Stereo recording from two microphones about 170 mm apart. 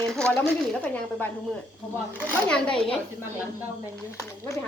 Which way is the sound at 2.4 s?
5° left (ahead or behind).